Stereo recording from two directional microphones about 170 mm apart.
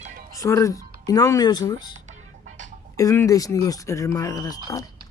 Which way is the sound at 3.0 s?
20° left (ahead or behind).